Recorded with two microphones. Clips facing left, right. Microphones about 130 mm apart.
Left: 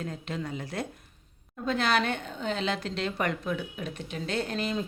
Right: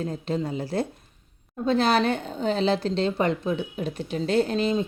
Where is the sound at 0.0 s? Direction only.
35° right (ahead or behind).